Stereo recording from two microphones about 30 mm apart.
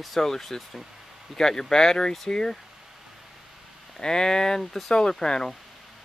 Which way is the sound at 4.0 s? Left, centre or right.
Left.